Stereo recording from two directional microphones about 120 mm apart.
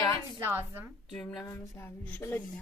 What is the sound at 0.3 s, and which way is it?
Speech, 20° right (ahead or behind).